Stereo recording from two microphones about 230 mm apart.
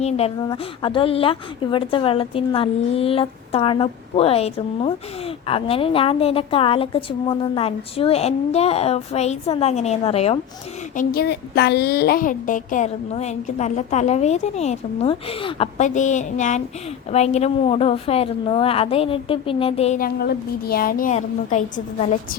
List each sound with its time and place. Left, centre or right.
0.0 s a woman's voice: left
10.9 s a woman's voice: left